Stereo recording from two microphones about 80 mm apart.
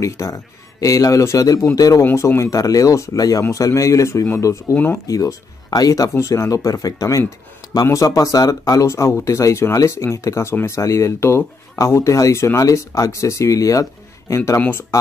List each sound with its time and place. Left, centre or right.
0.0 s speech: left
2.1 s speech: left
8.8 s speech: left
14.6 s speech: left